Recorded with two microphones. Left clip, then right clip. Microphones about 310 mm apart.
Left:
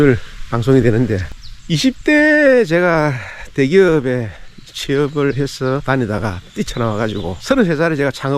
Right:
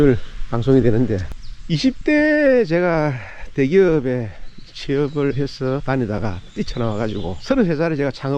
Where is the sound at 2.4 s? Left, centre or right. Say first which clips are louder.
Left 4 dB; centre.